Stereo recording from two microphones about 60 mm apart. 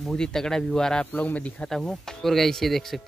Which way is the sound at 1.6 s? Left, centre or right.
Centre.